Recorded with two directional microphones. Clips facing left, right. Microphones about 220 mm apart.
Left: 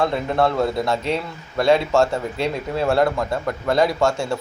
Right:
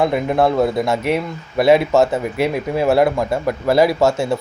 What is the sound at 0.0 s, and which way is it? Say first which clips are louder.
Speech: right 4 dB; 15° right (ahead or behind).